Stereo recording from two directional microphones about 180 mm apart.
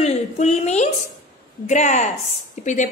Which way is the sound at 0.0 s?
40° left (ahead or behind).